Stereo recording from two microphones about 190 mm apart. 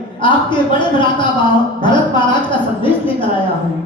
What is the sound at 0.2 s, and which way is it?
Speech, 25° left (ahead or behind).